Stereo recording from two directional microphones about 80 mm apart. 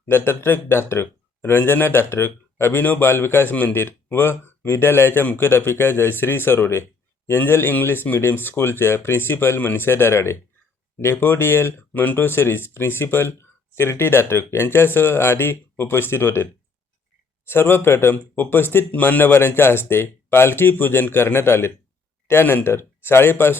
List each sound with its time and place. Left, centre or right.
0.0 s speech: left